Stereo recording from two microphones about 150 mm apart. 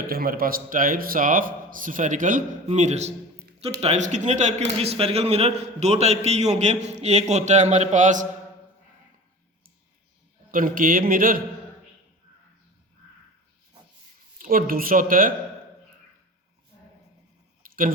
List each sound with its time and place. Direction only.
0.1 s a man's voice: 80° right; by 8.3 s 55° right (ahead or behind)
10.5 s a man's voice: 65° right (ahead or behind)
14.3 s a man's voice: 70° right (ahead or behind)
17.6 s a sound: 65° right (ahead or behind)